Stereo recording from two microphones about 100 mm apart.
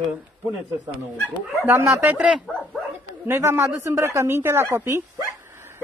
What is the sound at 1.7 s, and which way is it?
Speech, 30° right (ahead or behind).